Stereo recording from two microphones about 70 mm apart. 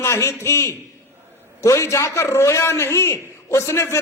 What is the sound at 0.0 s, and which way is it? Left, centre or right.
A man's voice, left.